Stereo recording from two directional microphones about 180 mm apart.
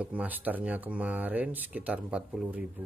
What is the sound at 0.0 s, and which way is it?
Speech, 10° right (ahead or behind).